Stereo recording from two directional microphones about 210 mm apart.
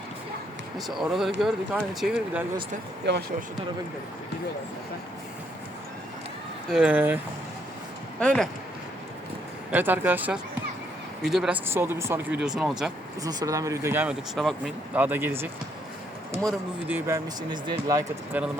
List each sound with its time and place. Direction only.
0.9 s speech: centre (ahead or behind)
3.1 s speech: 50° right (ahead or behind)
6.7 s speech: 5° right (ahead or behind)
8.2 s speech: 5° left (ahead or behind)
9.7 s speech: 10° right (ahead or behind)
13.2 s speech: 15° right (ahead or behind)
17.5 s speech: 20° right (ahead or behind)
18.3 s speech: 5° right (ahead or behind)